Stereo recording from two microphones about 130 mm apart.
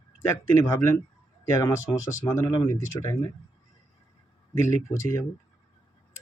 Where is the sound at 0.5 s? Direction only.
25° left (ahead or behind).